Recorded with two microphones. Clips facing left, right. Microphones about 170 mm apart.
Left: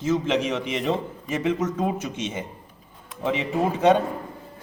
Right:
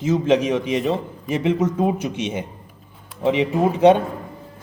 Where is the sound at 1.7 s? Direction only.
15° right (ahead or behind).